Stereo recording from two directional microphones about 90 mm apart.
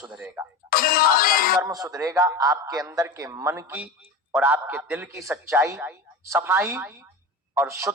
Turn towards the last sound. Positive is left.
turn(degrees=-30)  # may be behind; listen again after turning